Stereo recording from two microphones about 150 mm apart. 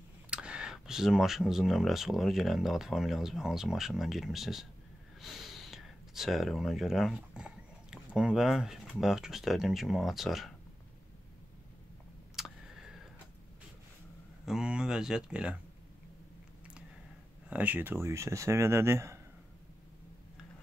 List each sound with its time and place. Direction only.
0.3 s speech: 5° right (ahead or behind)
12.4 s a sound: 5° right (ahead or behind)
14.4 s speech: 5° right (ahead or behind)
17.5 s speech: 10° right (ahead or behind)